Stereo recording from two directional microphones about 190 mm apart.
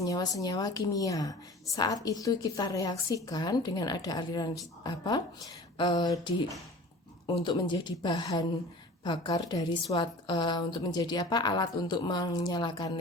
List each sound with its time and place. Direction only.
0.0 s a woman's voice: 20° left (ahead or behind)